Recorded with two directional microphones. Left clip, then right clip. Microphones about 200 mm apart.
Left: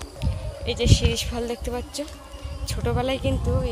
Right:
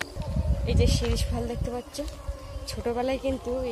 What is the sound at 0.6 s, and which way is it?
Speech, 5° left (ahead or behind).